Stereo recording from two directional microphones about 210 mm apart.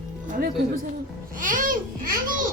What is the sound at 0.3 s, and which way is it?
A child's voice, 40° right (ahead or behind).